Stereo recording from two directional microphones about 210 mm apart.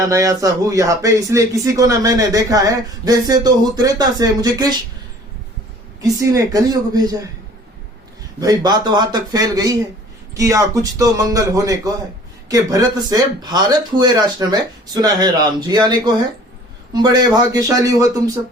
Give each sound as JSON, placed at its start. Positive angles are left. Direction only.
{"t": 0.0, "sound": "speech", "side_deg": -15}
{"t": 6.0, "sound": "speech", "side_deg": -15}
{"t": 8.4, "sound": "speech", "side_deg": -20}